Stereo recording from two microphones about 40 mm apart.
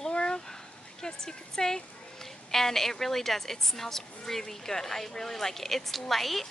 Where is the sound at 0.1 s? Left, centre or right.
Left.